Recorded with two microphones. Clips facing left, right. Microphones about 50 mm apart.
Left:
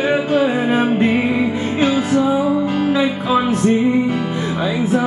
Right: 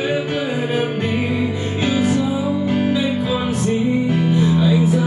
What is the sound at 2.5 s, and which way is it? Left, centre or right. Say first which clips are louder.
Music: left 2 dB; left.